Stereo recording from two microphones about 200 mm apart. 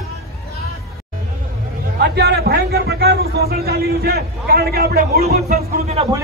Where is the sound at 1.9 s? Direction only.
55° right (ahead or behind).